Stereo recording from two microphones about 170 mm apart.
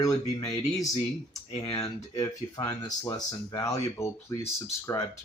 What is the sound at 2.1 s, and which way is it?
Speech, 20° left (ahead or behind).